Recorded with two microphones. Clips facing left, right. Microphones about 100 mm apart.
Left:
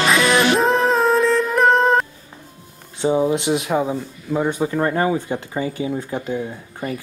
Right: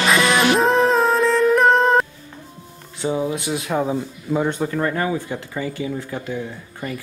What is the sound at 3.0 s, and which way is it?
Speech, 25° left (ahead or behind).